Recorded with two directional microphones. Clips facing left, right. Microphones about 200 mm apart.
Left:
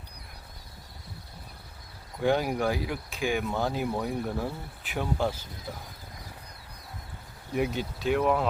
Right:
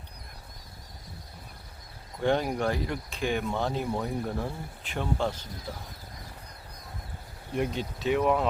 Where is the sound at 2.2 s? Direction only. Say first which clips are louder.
Left 1 dB; 5° left (ahead or behind).